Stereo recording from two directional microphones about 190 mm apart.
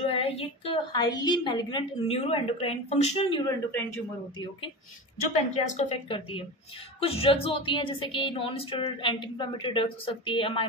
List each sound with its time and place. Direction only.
0.0 s speech: 30° left (ahead or behind)
3.7 s a man's voice: 15° left (ahead or behind)
5.5 s speech: 35° left (ahead or behind)